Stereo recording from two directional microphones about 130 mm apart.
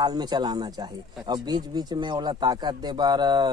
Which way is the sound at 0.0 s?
30° right (ahead or behind).